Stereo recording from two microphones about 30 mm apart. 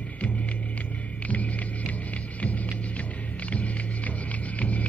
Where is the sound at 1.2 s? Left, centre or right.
Left.